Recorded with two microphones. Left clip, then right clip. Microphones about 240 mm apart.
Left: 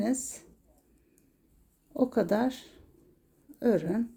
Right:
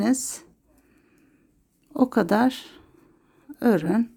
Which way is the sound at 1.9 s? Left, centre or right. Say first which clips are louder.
Right 6 dB; right.